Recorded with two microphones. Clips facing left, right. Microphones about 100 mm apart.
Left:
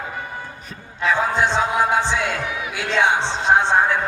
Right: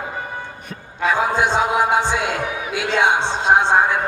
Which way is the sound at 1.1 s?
15° right (ahead or behind).